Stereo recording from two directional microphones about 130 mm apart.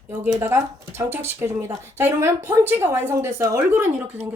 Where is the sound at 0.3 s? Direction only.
20° right (ahead or behind).